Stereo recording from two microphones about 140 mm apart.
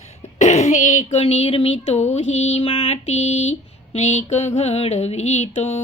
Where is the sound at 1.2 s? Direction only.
50° left (ahead or behind).